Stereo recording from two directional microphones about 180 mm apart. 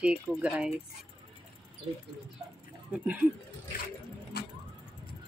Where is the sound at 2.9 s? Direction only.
10° right (ahead or behind).